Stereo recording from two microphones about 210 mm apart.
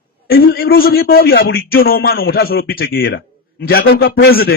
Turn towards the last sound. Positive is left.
turn(degrees=45)  # may be behind; listen again after turning